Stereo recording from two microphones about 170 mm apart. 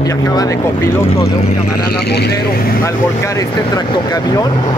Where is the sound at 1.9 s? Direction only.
70° left (ahead or behind).